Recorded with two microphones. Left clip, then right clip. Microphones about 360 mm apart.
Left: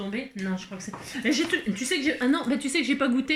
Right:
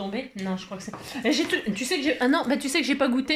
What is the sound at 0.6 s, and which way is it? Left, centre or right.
Speech, centre.